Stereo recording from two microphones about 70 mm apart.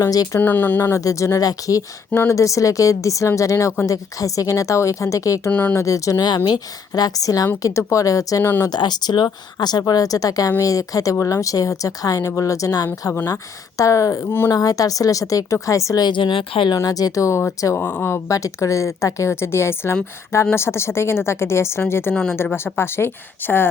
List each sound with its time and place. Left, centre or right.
0.0 s a woman's voice: left
0.3 s speech: left
1.0 s a woman's voice: left
5.5 s speech: centre
5.7 s a woman's voice: left
6.1 s speech: left
7.6 s a woman's voice: left
8.6 s a woman's voice: left
14.2 s a woman's voice: left
14.5 s a woman's voice: left
17.7 s a woman's voice: left
18.3 s a woman's voice: left